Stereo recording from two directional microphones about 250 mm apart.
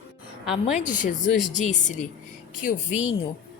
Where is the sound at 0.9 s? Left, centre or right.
Left.